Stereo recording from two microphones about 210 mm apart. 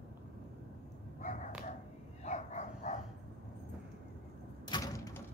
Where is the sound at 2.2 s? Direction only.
35° left (ahead or behind).